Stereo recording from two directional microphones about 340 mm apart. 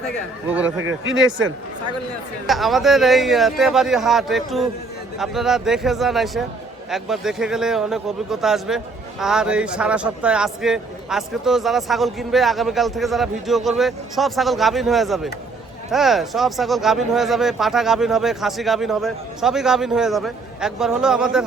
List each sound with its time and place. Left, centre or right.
0.4 s a man's voice: centre
0.8 s speech: right
2.5 s a man's voice: centre